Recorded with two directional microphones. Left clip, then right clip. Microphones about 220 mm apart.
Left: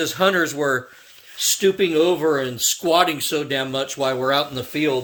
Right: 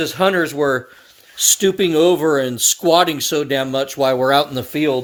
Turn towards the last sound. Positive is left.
turn(degrees=-50)  # may be behind; listen again after turning